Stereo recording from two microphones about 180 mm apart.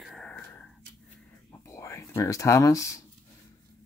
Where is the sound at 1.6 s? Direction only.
15° left (ahead or behind).